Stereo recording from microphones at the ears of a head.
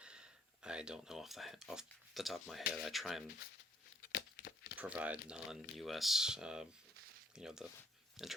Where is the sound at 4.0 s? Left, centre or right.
Left.